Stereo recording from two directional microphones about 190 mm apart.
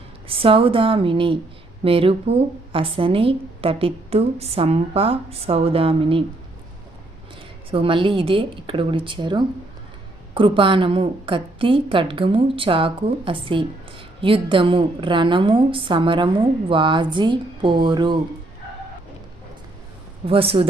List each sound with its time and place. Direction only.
0.3 s speech: 30° right (ahead or behind)
7.7 s speech: 25° right (ahead or behind)
20.2 s speech: 30° right (ahead or behind)